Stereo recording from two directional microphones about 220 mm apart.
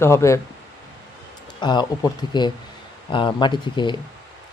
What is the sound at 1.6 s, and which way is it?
Speech, 20° left (ahead or behind).